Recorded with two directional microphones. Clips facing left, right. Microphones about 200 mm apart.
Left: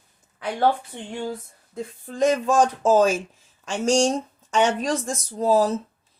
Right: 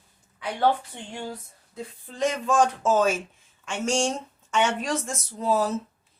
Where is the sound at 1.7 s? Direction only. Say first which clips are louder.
Left 5 dB; 45° left (ahead or behind).